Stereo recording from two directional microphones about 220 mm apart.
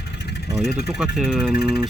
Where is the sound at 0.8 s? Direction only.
Centre (ahead or behind).